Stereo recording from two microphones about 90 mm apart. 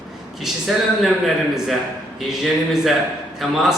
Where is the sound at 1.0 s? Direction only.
5° right (ahead or behind).